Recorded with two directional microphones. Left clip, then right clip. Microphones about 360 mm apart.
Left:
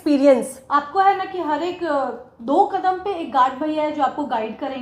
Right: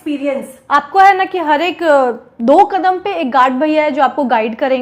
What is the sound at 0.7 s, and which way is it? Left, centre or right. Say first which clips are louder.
A woman's voice: right 8 dB; right.